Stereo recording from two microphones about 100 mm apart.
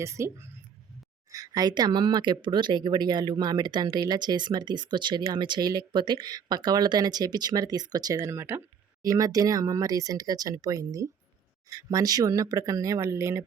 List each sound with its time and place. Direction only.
0.0 s speech: 30° right (ahead or behind)
1.3 s speech: 40° right (ahead or behind)
9.0 s speech: 35° right (ahead or behind)